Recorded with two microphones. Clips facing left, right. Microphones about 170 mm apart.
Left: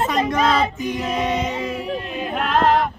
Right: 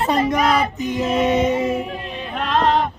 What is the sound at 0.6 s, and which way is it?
Female singing, 20° right (ahead or behind).